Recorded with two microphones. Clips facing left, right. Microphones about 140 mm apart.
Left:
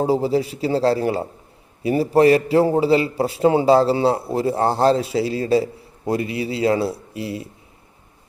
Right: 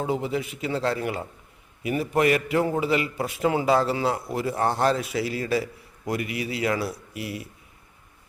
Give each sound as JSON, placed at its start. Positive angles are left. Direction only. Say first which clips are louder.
{"t": 0.0, "sound": "a man's voice", "louder": "left 8 dB", "side_deg": 35}